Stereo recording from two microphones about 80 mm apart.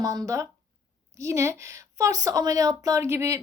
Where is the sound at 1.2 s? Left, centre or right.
Right.